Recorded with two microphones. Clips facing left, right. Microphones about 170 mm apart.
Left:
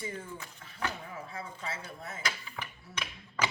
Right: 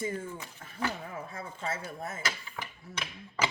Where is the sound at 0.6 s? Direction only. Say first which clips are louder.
Right 3 dB; 50° right (ahead or behind).